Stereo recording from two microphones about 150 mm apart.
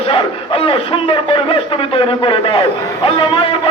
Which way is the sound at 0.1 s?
35° left (ahead or behind).